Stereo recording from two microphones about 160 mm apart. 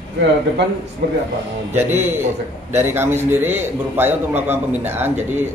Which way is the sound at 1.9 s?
15° right (ahead or behind).